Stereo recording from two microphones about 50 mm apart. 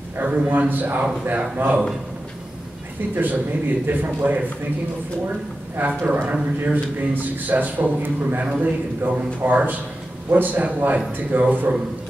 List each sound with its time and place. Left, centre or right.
0.2 s a man's voice: right
3.2 s a man's voice: right
5.8 s a man's voice: right